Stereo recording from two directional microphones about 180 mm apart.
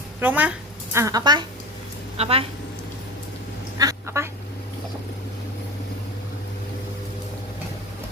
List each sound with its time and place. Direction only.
0.2 s speech: 10° right (ahead or behind)
0.9 s a woman's voice: 20° right (ahead or behind)
2.1 s speech: 35° right (ahead or behind)
3.8 s quack: 20° right (ahead or behind)